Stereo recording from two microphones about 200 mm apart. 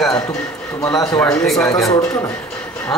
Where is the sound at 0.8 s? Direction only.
20° left (ahead or behind).